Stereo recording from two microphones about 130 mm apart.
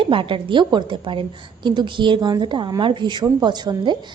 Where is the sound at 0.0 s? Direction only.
40° right (ahead or behind).